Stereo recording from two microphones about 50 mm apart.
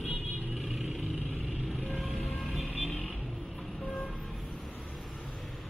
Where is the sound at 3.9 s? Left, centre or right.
Left.